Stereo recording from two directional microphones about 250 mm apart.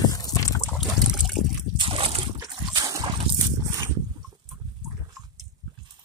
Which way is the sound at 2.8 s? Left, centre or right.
Centre.